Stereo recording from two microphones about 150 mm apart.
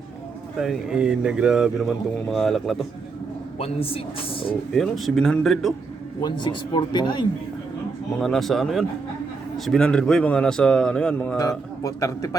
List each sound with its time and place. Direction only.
0.6 s a man's voice: 5° right (ahead or behind)
3.6 s speech: 40° left (ahead or behind)
4.7 s a man's voice: centre (ahead or behind)
6.2 s speech: 30° left (ahead or behind)
8.2 s a man's voice: centre (ahead or behind)
11.3 s speech: 25° left (ahead or behind)